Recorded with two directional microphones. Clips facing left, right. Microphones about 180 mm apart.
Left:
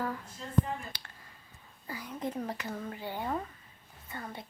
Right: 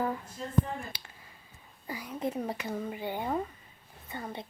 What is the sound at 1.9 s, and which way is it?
A woman's voice, 10° right (ahead or behind).